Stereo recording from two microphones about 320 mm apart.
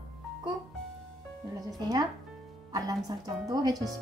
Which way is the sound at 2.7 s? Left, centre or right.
Centre.